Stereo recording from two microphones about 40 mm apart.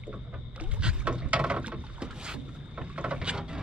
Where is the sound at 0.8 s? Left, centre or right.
Right.